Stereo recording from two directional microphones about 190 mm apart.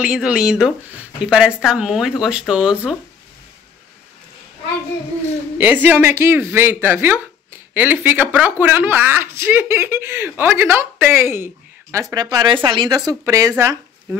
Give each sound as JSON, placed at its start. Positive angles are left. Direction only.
{"t": 0.0, "sound": "speech", "side_deg": -5}
{"t": 5.6, "sound": "a woman's voice", "side_deg": -10}